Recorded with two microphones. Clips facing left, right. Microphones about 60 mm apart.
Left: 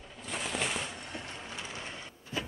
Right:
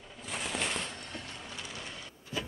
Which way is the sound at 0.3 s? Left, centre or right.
Centre.